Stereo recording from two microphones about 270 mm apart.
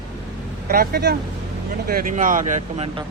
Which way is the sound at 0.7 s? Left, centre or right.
Right.